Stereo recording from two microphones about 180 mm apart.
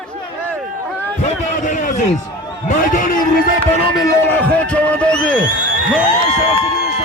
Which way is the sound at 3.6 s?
10° left (ahead or behind).